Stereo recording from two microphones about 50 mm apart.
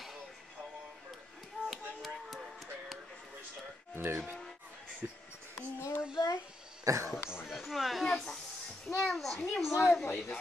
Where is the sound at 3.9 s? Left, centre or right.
Right.